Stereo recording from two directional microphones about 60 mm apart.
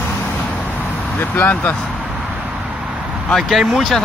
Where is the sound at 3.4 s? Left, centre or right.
Centre.